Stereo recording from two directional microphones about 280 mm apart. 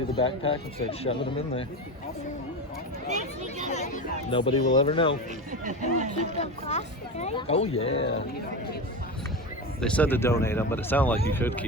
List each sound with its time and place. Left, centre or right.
0.2 s speech: centre
3.7 s speech: left
5.5 s speech: right
6.3 s speech: left
9.8 s speech: centre